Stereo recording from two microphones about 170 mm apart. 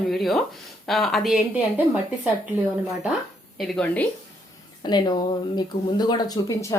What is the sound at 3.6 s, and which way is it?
Speech, 10° left (ahead or behind).